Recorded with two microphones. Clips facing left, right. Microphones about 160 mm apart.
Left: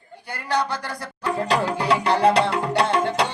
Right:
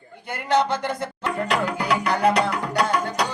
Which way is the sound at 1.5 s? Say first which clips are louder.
Left 3 dB; 30° left (ahead or behind).